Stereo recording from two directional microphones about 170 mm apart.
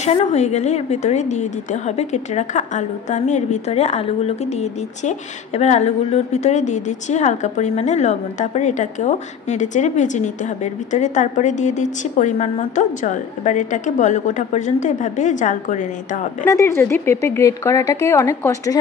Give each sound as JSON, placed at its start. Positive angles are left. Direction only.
{"t": 0.0, "sound": "a woman's voice", "side_deg": 40}
{"t": 16.4, "sound": "speech", "side_deg": 15}